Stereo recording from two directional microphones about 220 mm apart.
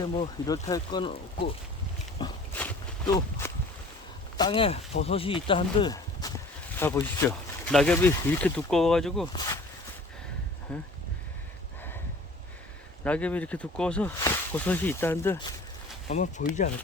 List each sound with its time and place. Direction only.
0.0 s speech: 15° left (ahead or behind)
2.2 s dog: 20° left (ahead or behind)
2.6 s a sound: 5° left (ahead or behind)
3.2 s speech: 10° left (ahead or behind)
4.4 s speech: 20° left (ahead or behind); by 9.2 s centre (ahead or behind)
10.7 s speech: 5° left (ahead or behind)
13.1 s speech: 5° left (ahead or behind)
16.0 s speech: 35° left (ahead or behind)